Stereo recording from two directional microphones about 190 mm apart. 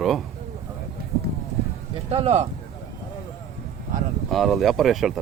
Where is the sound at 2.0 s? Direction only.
35° right (ahead or behind).